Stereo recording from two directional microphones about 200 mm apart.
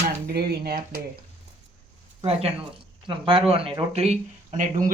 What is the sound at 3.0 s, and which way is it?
Speech, 25° right (ahead or behind).